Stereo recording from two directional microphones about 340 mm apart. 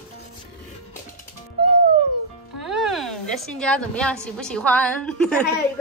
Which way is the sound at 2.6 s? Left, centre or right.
Centre.